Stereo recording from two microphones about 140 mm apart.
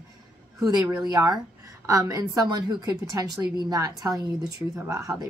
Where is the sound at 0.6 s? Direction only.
25° right (ahead or behind).